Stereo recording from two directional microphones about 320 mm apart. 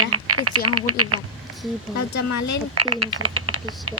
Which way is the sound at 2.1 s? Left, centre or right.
Left.